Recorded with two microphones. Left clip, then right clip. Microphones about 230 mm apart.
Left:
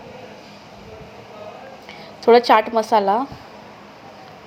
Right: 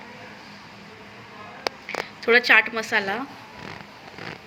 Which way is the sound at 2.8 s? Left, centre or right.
Left.